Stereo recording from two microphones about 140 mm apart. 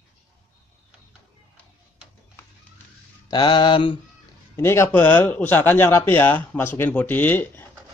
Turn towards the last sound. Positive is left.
turn(degrees=15)  # may be behind; listen again after turning